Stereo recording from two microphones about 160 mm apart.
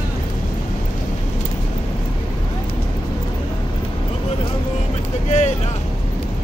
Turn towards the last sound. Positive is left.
turn(degrees=50)  # may be behind; listen again after turning